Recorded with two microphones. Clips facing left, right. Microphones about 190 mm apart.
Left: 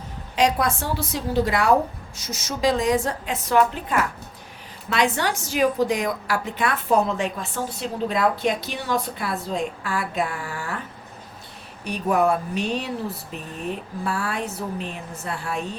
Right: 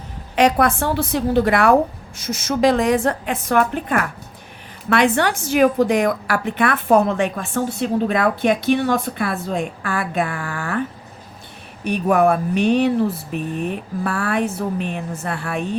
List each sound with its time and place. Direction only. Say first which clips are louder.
0.3 s speech: right 5 dB; 60° right (ahead or behind)
11.9 s speech: right 5 dB; 60° right (ahead or behind)
14.0 s speech: right 7 dB; 60° right (ahead or behind)